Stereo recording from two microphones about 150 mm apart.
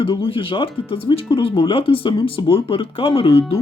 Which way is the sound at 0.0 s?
35° left (ahead or behind).